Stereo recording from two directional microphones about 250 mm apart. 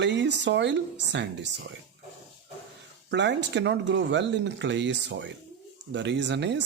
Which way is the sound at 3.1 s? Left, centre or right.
Right.